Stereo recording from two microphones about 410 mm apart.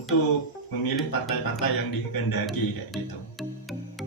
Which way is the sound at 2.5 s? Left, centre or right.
Centre.